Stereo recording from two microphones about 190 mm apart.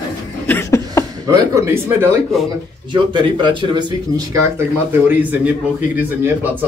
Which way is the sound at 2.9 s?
25° right (ahead or behind).